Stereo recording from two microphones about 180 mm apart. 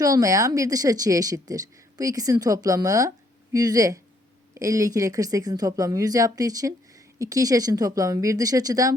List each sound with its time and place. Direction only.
0.0 s speech: 20° right (ahead or behind)